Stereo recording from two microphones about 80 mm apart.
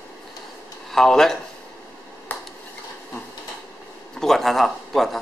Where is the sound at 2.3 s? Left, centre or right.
Left.